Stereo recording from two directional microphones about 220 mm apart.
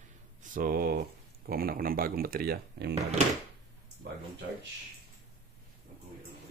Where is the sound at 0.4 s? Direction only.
40° right (ahead or behind).